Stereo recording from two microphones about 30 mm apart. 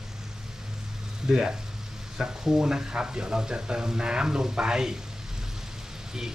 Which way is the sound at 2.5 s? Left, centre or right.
Right.